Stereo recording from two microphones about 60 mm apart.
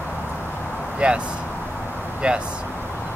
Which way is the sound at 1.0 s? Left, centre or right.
Centre.